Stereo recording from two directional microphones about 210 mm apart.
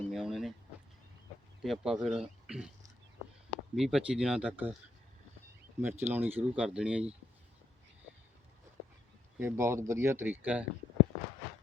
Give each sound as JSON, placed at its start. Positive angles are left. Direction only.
{"t": 0.1, "sound": "a sound", "side_deg": 0}
{"t": 1.6, "sound": "speech", "side_deg": 0}
{"t": 5.8, "sound": "speech", "side_deg": -10}
{"t": 9.4, "sound": "speech", "side_deg": -10}